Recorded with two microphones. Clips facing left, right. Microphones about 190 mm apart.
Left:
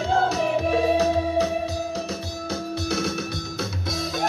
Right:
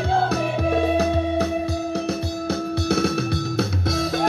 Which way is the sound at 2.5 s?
60° right (ahead or behind).